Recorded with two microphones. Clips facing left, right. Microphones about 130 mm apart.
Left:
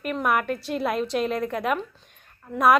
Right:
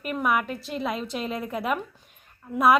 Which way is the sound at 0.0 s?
Centre (ahead or behind).